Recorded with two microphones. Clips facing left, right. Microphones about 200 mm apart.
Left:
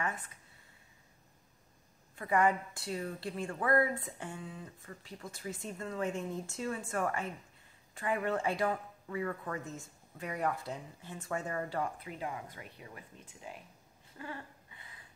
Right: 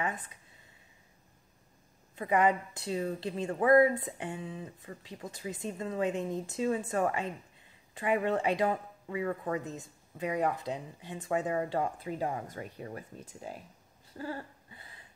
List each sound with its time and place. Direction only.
2.1 s a woman's voice: 20° right (ahead or behind)
12.1 s speech: 40° right (ahead or behind)
14.1 s a sound: 35° right (ahead or behind)